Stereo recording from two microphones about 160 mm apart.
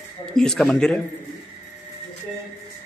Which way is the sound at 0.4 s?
Centre (ahead or behind).